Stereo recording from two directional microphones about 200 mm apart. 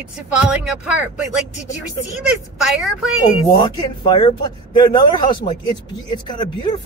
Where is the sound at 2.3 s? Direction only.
5° right (ahead or behind).